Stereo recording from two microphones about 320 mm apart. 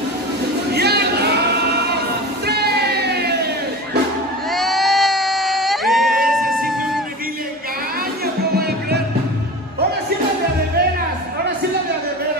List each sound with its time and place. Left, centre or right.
0.7 s male singing: right
4.5 s a sound: centre
8.5 s music: right